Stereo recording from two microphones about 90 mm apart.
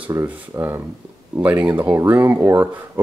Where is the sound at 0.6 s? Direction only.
40° right (ahead or behind).